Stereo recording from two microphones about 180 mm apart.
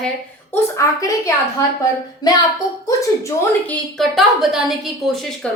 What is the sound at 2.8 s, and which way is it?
Speech, 15° left (ahead or behind).